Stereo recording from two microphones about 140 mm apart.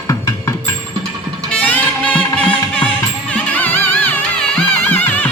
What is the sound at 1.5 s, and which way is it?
Music, 10° left (ahead or behind).